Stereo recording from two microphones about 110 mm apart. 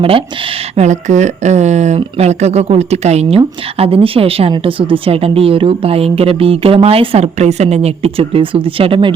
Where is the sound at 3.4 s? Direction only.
60° right (ahead or behind).